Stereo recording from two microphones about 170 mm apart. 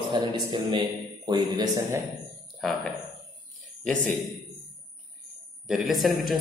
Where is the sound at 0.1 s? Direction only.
25° right (ahead or behind).